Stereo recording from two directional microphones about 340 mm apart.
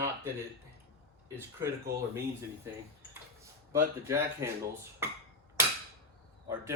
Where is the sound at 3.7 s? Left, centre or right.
Centre.